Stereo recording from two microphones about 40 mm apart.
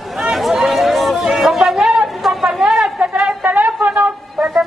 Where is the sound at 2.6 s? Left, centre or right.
Right.